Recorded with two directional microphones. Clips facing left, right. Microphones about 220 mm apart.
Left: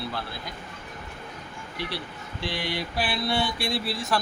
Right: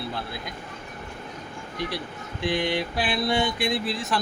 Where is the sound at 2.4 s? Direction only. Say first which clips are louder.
Right 6 dB; 20° right (ahead or behind).